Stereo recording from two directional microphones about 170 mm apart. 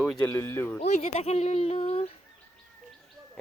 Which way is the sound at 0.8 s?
40° left (ahead or behind).